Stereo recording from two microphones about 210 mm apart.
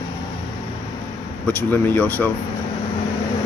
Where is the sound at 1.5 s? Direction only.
10° left (ahead or behind).